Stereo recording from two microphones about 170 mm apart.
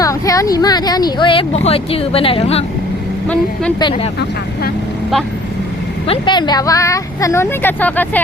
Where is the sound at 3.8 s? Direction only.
30° left (ahead or behind).